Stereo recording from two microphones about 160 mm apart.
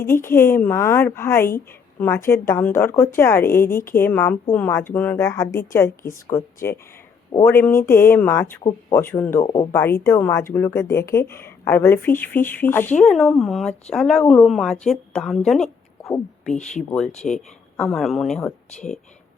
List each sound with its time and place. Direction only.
0.0 s speech: 15° left (ahead or behind)
7.4 s a woman's voice: 15° left (ahead or behind)
16.7 s a woman's voice: 5° left (ahead or behind)